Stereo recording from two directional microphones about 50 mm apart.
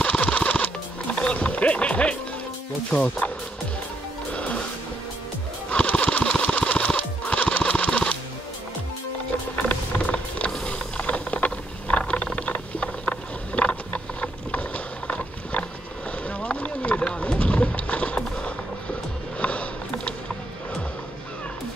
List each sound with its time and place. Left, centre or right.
0.0 s music: left
2.9 s speech: left
4.3 s music: left
5.7 s a sound: left
7.0 s music: left
9.6 s vehicle: left
10.5 s a sound: left
12.8 s vehicle: left
16.3 s clip-clop: left
19.4 s sniff: left